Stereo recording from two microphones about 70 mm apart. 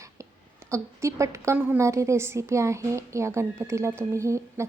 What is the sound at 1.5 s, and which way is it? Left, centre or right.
Speech, right.